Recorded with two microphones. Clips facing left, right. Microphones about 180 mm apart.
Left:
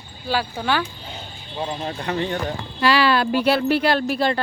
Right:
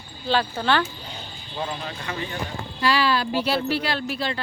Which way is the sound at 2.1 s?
65° left (ahead or behind).